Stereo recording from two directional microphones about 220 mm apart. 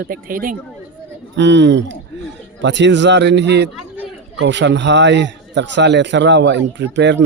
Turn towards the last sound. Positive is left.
turn(degrees=-55)  # may be behind; listen again after turning